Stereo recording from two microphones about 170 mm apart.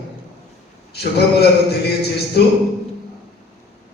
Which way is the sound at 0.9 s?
70° left (ahead or behind).